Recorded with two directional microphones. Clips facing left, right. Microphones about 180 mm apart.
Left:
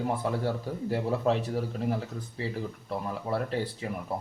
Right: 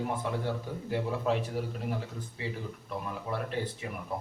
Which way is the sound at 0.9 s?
35° left (ahead or behind).